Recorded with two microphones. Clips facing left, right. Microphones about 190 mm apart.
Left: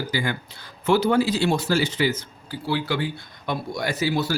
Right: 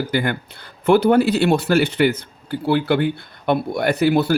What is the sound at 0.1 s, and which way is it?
Speech, 60° right (ahead or behind).